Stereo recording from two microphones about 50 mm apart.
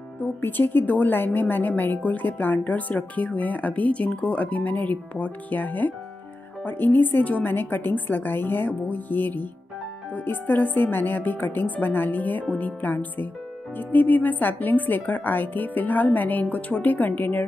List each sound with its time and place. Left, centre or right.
0.2 s speech: left